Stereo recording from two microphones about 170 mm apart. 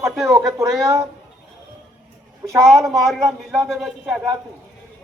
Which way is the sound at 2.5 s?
Centre (ahead or behind).